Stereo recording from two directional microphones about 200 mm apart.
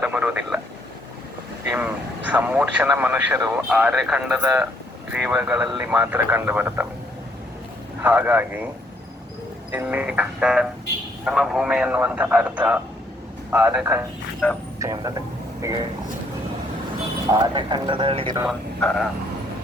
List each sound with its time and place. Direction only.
0.0 s vehicle: 5° right (ahead or behind)
1.7 s speech: 5° right (ahead or behind)
8.0 s speech: 10° right (ahead or behind)
9.7 s speech: 10° right (ahead or behind)
14.4 s speech: 10° left (ahead or behind)
14.8 s speech: 15° right (ahead or behind)
17.5 s speech: 25° right (ahead or behind)
18.4 s a man's voice: centre (ahead or behind)